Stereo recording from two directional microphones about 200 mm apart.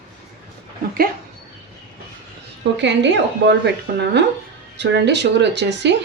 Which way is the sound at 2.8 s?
60° right (ahead or behind).